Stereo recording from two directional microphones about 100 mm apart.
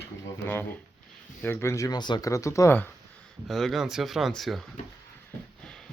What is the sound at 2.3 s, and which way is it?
Speech, 30° left (ahead or behind).